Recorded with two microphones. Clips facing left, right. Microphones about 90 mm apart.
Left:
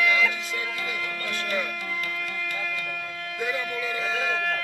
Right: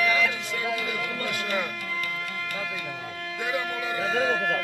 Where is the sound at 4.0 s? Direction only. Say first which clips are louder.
Right 5 dB; 45° right (ahead or behind).